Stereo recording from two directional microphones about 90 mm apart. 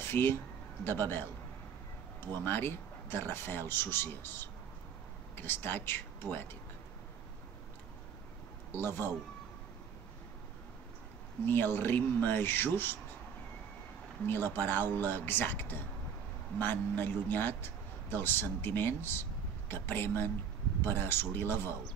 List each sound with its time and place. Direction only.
0.0 s speech: 25° left (ahead or behind)
2.4 s speech: 25° left (ahead or behind)
8.7 s speech: 25° left (ahead or behind)
11.4 s speech: 25° left (ahead or behind)
14.2 s speech: 25° left (ahead or behind)